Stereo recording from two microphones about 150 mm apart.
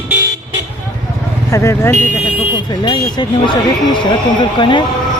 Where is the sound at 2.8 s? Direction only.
30° left (ahead or behind).